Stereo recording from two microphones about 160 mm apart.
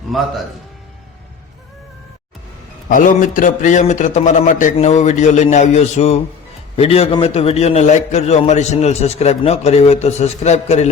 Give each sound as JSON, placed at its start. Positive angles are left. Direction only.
{"t": 0.1, "sound": "a man's voice", "side_deg": 0}
{"t": 2.9, "sound": "a man's voice", "side_deg": 55}